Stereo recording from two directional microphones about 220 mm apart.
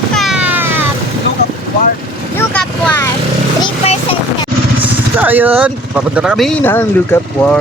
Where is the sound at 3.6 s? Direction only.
25° left (ahead or behind).